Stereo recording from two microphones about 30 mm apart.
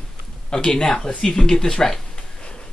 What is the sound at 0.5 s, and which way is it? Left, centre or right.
Speech, left.